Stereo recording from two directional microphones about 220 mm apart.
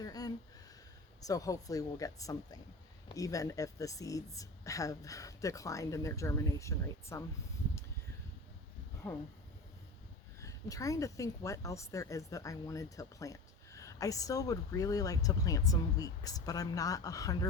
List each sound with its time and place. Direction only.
0.0 s a sound: 15° left (ahead or behind)
1.2 s speech: 15° left (ahead or behind)
9.0 s speech: 5° left (ahead or behind)
10.4 s speech: 15° left (ahead or behind)